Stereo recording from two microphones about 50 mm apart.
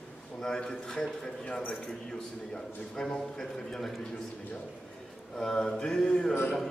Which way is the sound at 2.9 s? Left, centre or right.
Centre.